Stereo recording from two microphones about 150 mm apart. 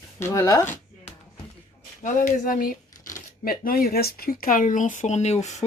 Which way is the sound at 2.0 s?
60° left (ahead or behind).